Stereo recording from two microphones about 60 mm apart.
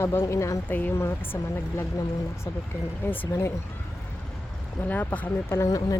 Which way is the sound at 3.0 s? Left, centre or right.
Left.